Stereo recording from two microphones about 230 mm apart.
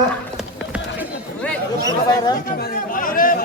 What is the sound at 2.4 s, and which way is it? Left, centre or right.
Chatter, left.